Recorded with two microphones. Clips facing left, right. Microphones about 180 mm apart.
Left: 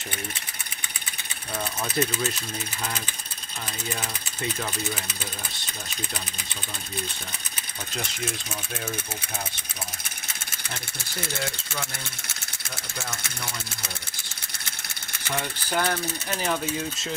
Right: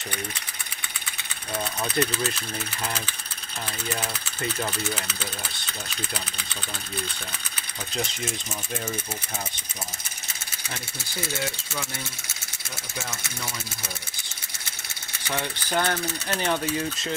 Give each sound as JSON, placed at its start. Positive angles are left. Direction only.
{"t": 2.0, "sound": "speech", "side_deg": 0}
{"t": 15.7, "sound": "speech", "side_deg": 5}